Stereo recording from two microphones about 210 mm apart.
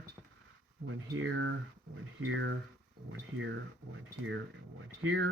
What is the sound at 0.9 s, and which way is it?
Speech, 70° right (ahead or behind).